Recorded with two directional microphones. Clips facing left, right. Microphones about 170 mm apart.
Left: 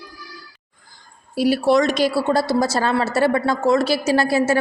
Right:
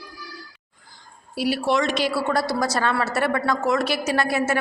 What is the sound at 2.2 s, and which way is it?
A woman's voice, 25° left (ahead or behind).